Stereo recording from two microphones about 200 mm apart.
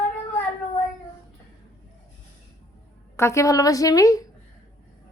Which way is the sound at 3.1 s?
15° left (ahead or behind).